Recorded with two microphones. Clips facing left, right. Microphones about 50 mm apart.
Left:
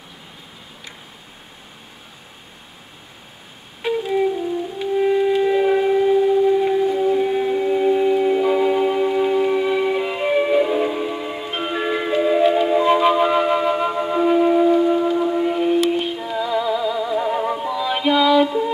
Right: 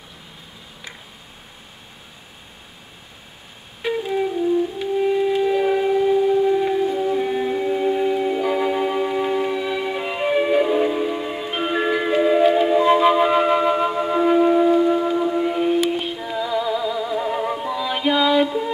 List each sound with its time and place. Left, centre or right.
4.7 s music: centre
9.5 s music: centre
12.8 s flute: centre
18.0 s music: centre